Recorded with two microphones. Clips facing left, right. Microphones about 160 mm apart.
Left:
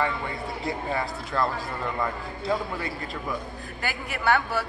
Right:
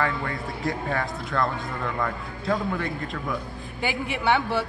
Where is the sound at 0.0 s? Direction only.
Centre (ahead or behind).